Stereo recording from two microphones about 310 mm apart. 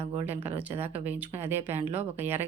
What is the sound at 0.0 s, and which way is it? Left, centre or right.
Speech, centre.